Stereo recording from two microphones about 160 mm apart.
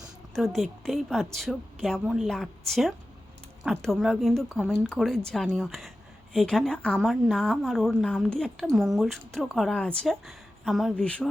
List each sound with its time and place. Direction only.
0.3 s a woman's voice: centre (ahead or behind)
4.6 s speech: 10° right (ahead or behind)
4.9 s a woman's voice: centre (ahead or behind)